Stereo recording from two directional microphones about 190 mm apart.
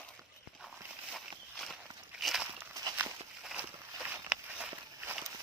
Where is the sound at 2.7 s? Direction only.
15° right (ahead or behind).